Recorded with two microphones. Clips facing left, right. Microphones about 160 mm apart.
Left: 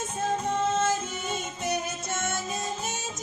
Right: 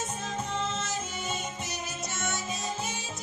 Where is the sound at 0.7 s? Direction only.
50° left (ahead or behind).